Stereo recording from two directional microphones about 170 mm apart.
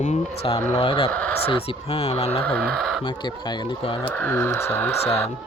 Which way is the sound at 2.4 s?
5° left (ahead or behind).